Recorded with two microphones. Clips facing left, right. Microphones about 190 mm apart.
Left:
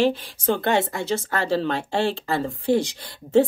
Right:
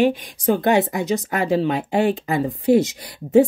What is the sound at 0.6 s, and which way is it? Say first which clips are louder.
Speech: right 4 dB; 15° right (ahead or behind).